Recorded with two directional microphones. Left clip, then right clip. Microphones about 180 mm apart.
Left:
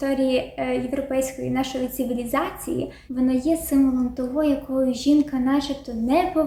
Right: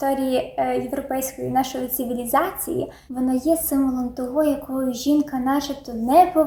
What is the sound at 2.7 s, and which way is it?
A woman's voice, centre (ahead or behind).